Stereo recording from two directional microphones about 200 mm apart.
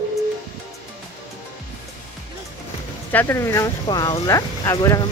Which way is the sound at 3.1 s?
15° left (ahead or behind).